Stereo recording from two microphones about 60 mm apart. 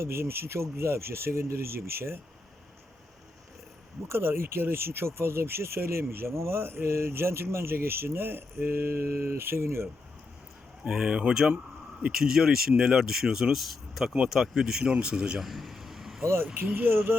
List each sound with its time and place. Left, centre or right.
0.0 s speech: right
4.1 s speech: right
10.8 s speech: centre
15.4 s vehicle: centre
16.2 s speech: right